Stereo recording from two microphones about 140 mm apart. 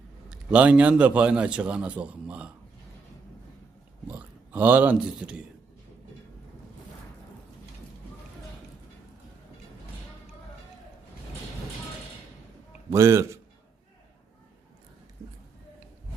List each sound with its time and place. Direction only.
0.3 s a man's voice: 10° right (ahead or behind)
4.1 s speech: 15° right (ahead or behind)
12.9 s a man's voice: 20° right (ahead or behind)